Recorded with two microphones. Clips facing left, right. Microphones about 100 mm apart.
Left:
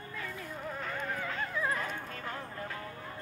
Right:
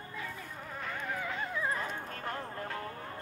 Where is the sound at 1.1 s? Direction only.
15° right (ahead or behind).